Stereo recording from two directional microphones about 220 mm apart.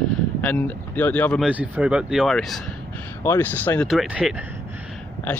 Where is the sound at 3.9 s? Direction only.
5° right (ahead or behind).